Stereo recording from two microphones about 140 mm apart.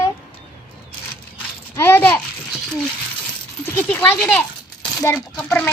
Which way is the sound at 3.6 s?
15° left (ahead or behind).